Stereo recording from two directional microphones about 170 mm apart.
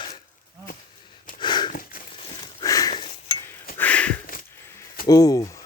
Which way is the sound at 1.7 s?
55° left (ahead or behind).